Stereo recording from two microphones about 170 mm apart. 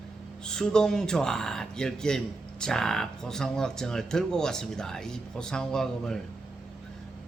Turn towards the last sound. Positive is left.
turn(degrees=5)  # may be behind; listen again after turning